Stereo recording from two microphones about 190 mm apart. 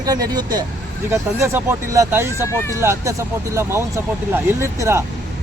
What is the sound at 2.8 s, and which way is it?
Speech, 15° right (ahead or behind).